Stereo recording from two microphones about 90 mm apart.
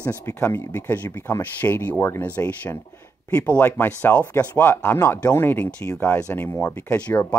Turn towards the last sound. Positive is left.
turn(degrees=15)  # may be behind; listen again after turning